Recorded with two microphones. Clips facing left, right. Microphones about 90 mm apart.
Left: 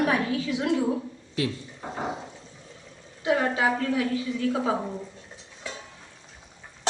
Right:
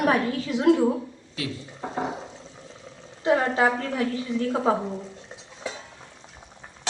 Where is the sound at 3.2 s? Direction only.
35° right (ahead or behind).